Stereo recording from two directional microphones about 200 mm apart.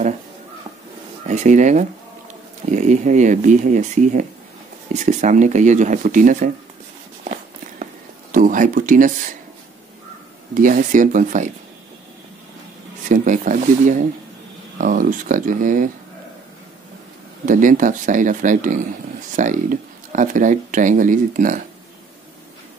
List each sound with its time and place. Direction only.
1.2 s speech: 35° right (ahead or behind)
8.3 s speech: 40° right (ahead or behind)
10.5 s speech: 40° right (ahead or behind)
13.1 s speech: 40° right (ahead or behind)
17.5 s speech: 40° right (ahead or behind)